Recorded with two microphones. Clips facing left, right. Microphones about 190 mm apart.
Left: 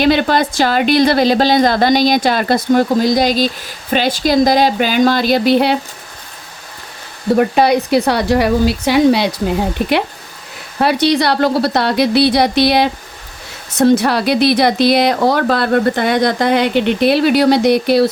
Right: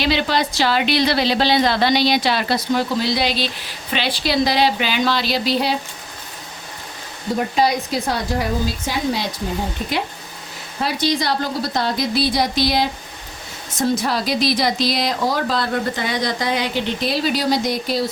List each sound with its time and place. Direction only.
0.0 s a woman's voice: 50° left (ahead or behind)
7.3 s a woman's voice: 60° left (ahead or behind)